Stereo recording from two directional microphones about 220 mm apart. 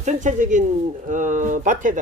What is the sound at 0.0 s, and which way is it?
Speech, 35° right (ahead or behind).